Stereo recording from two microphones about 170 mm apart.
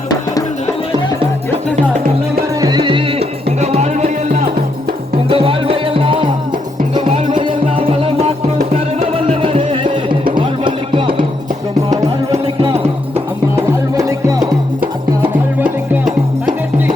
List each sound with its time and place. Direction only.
2.6 s music: 25° right (ahead or behind)
13.9 s music: 20° right (ahead or behind)